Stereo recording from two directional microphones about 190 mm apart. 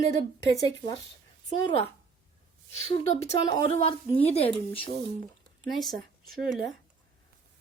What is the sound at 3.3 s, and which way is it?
Speech, 30° left (ahead or behind).